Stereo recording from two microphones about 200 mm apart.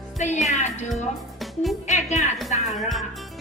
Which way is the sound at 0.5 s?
35° left (ahead or behind).